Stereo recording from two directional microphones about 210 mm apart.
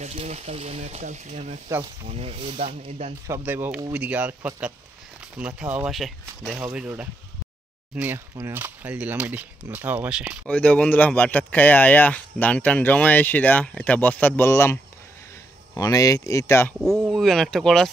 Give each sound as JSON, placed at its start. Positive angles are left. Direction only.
{"t": 0.0, "sound": "speech", "side_deg": -30}
{"t": 3.3, "sound": "speech", "side_deg": -10}
{"t": 10.5, "sound": "speech", "side_deg": 5}
{"t": 16.8, "sound": "speech", "side_deg": 0}